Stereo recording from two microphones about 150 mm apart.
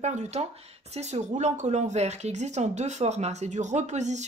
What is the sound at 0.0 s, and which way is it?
Speech, 50° right (ahead or behind).